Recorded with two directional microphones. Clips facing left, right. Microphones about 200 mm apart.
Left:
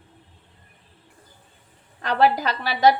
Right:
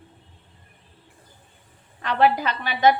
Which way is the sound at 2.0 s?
40° left (ahead or behind).